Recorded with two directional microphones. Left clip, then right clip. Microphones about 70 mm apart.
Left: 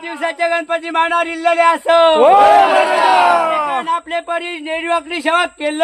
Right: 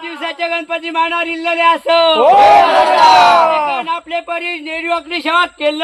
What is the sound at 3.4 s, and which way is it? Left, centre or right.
Speech, left.